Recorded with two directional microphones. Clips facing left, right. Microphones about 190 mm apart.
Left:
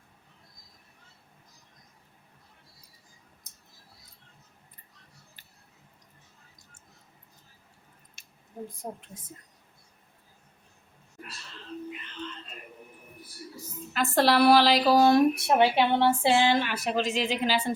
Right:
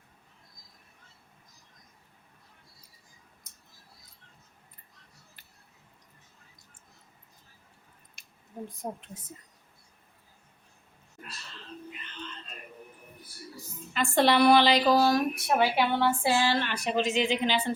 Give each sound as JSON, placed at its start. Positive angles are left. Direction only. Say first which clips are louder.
{"t": 13.9, "sound": "a woman's voice", "louder": "even", "side_deg": 0}
{"t": 14.9, "sound": "speech", "louder": "left 4 dB", "side_deg": 25}